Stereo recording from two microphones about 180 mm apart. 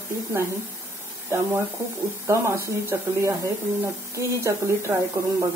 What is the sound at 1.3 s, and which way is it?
Speech, 15° right (ahead or behind).